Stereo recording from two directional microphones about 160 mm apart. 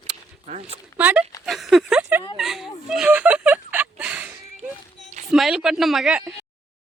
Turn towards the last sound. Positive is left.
turn(degrees=-5)  # may be behind; listen again after turning